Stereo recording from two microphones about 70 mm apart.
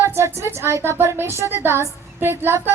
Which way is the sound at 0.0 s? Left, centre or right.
Right.